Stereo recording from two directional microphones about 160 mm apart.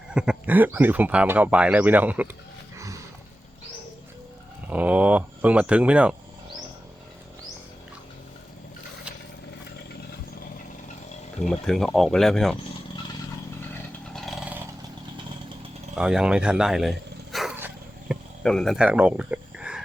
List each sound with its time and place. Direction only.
0.1 s speech: 5° right (ahead or behind)
2.7 s a sound: 20° right (ahead or behind)
4.7 s speech: 10° right (ahead or behind)
11.4 s speech: 5° left (ahead or behind)
14.1 s vehicle: centre (ahead or behind)
16.0 s speech: 5° right (ahead or behind)
17.3 s dog: centre (ahead or behind)
18.1 s cricket: centre (ahead or behind)